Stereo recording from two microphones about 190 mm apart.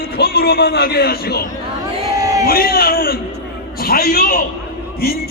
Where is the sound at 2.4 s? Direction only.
50° left (ahead or behind).